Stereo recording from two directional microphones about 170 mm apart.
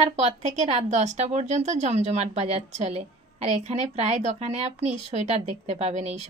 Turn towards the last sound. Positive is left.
turn(degrees=-40)  # may be behind; listen again after turning